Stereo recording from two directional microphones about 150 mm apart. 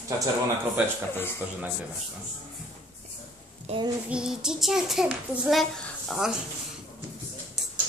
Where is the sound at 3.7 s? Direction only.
45° right (ahead or behind).